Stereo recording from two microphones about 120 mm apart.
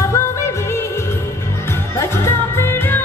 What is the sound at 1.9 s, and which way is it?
Music, 20° left (ahead or behind).